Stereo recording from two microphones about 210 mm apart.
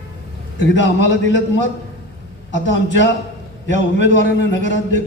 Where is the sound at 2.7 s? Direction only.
60° left (ahead or behind).